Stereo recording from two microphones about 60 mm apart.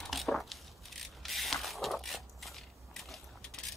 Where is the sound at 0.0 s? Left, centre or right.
Centre.